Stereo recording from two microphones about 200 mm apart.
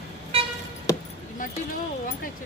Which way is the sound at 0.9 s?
15° left (ahead or behind).